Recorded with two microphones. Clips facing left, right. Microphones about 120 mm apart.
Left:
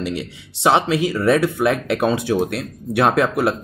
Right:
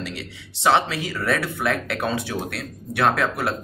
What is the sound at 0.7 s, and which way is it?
Speech, 20° left (ahead or behind).